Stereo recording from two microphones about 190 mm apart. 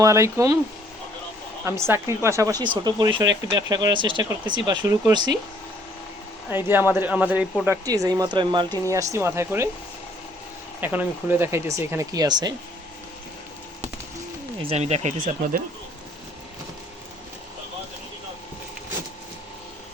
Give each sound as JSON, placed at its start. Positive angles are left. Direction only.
{"t": 0.0, "sound": "speech", "side_deg": -15}
{"t": 1.6, "sound": "speech", "side_deg": -15}
{"t": 6.5, "sound": "speech", "side_deg": -10}
{"t": 10.8, "sound": "speech", "side_deg": -10}
{"t": 14.6, "sound": "speech", "side_deg": -30}